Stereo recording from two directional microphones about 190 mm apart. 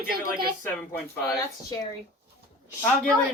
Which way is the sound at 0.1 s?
50° right (ahead or behind).